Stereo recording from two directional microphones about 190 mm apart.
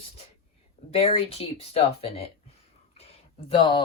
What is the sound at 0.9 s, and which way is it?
Speech, 30° left (ahead or behind).